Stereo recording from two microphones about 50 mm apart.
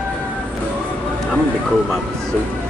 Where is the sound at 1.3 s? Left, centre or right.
Centre.